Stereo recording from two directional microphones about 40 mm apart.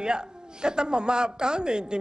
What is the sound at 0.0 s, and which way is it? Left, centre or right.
A man's voice, right.